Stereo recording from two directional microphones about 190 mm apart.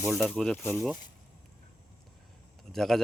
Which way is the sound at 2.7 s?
Centre (ahead or behind).